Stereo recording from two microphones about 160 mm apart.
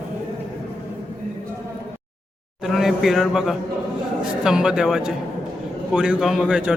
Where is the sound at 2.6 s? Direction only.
Centre (ahead or behind).